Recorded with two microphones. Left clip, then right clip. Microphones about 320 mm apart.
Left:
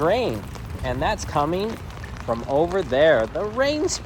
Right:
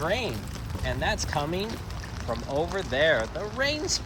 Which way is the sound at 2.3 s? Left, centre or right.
Left.